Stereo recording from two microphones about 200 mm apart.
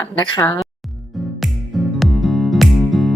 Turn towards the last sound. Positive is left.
turn(degrees=0)  # may be behind; listen again after turning